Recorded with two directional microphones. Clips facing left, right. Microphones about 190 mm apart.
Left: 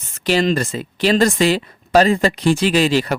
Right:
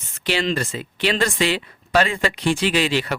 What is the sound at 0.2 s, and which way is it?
Speech, 40° left (ahead or behind).